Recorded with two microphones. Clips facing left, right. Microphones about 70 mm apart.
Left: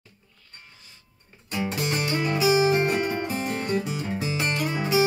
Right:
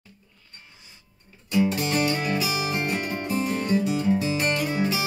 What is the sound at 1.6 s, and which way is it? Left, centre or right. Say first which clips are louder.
Music: right 4 dB; left.